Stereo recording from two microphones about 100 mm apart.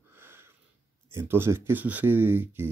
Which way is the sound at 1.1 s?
25° right (ahead or behind).